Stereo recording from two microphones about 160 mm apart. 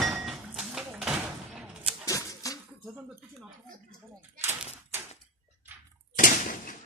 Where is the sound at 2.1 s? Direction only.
20° left (ahead or behind).